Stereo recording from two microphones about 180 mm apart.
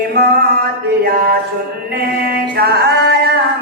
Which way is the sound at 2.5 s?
60° right (ahead or behind).